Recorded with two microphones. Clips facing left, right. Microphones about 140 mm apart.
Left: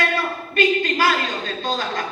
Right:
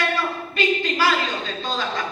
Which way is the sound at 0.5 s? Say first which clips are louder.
Left 4 dB; 50° left (ahead or behind).